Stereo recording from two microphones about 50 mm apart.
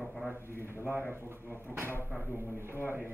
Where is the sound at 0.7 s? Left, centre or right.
Right.